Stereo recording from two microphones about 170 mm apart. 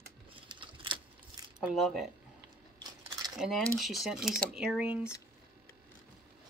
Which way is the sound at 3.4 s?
5° left (ahead or behind).